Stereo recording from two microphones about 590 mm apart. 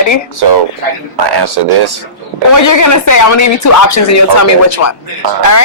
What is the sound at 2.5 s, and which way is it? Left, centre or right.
Speech, left.